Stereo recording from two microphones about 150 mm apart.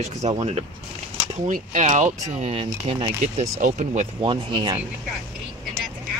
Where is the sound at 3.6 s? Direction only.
50° right (ahead or behind).